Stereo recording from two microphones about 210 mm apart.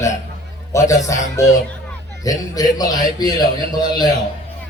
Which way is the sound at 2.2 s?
15° left (ahead or behind).